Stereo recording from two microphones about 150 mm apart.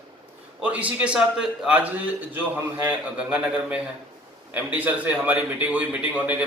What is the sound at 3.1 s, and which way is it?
A man's voice, 10° right (ahead or behind).